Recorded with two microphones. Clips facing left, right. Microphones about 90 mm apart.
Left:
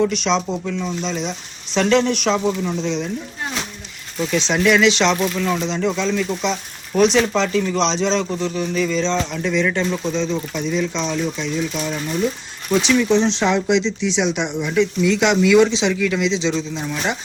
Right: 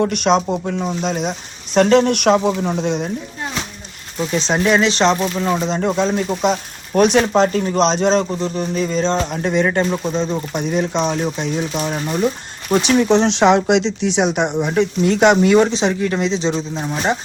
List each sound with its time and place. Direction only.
0.0 s speech: 50° right (ahead or behind)
2.1 s speech: 60° right (ahead or behind)
2.5 s speech: 45° right (ahead or behind)
4.2 s speech: 35° right (ahead or behind)